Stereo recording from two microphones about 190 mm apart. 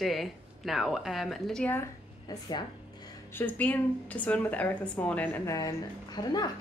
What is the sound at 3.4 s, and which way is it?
A woman's voice, 10° left (ahead or behind).